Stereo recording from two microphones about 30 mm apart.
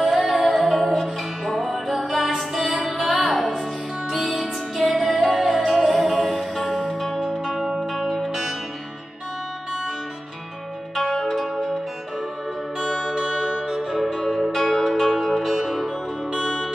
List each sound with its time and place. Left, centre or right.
0.1 s music: centre
4.9 s music: centre
7.5 s music: centre
11.2 s zither: centre
13.0 s music: right; by 15.9 s centre